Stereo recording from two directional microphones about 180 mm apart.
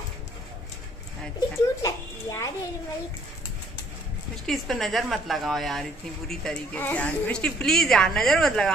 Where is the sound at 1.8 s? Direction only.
20° left (ahead or behind).